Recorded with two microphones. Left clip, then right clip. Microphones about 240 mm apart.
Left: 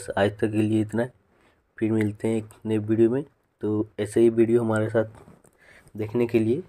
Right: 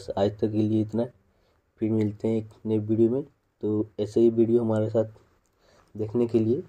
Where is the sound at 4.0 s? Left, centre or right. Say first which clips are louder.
Left 2 dB; left.